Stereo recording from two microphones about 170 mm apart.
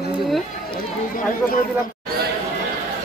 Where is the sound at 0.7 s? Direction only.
55° left (ahead or behind).